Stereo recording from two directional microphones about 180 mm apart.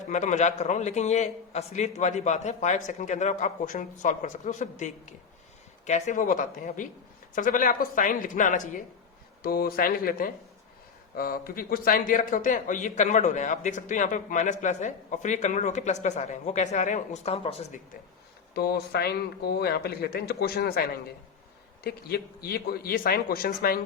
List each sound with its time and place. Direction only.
0.1 s a man's voice: 40° left (ahead or behind)
9.4 s a man's voice: 55° left (ahead or behind); by 17.7 s 35° left (ahead or behind)
18.5 s speech: 60° left (ahead or behind)